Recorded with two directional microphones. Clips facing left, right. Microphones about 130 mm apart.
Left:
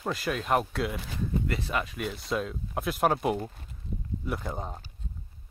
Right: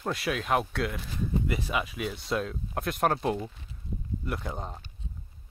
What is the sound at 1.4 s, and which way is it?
Speech, 10° right (ahead or behind).